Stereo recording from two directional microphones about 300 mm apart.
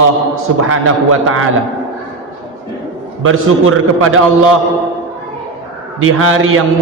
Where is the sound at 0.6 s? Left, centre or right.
Right.